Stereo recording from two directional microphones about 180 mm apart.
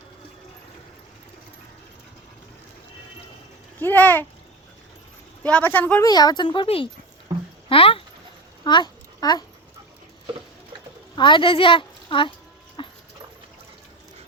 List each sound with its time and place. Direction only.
3.8 s speech: 10° left (ahead or behind)
5.4 s speech: 10° left (ahead or behind)
6.1 s a child's voice: 20° left (ahead or behind)
8.6 s babbling: 25° left (ahead or behind)
11.1 s speech: 25° left (ahead or behind)
12.8 s dog: 25° left (ahead or behind)